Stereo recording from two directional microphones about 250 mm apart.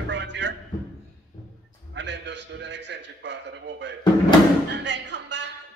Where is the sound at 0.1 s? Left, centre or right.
Right.